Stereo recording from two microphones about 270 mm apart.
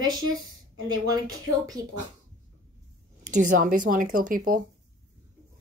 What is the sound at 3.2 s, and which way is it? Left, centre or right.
Speech, right.